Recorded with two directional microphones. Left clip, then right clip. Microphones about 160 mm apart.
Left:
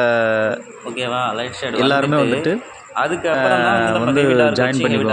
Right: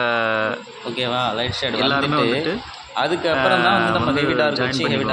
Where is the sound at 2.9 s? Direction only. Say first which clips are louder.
Left 1 dB; 15° right (ahead or behind).